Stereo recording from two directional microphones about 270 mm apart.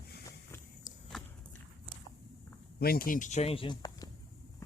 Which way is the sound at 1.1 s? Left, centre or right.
Centre.